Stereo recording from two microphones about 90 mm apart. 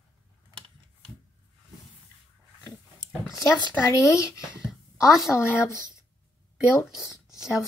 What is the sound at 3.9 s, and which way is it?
Speech, 35° left (ahead or behind).